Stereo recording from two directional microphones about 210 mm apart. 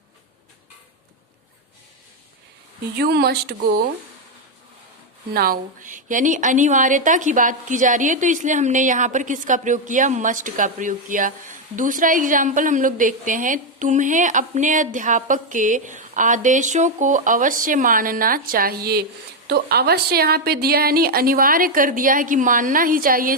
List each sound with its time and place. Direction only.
3.0 s a woman's voice: 50° right (ahead or behind)
5.3 s a woman's voice: 45° right (ahead or behind)